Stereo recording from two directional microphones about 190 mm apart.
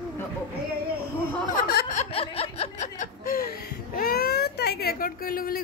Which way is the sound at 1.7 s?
55° left (ahead or behind).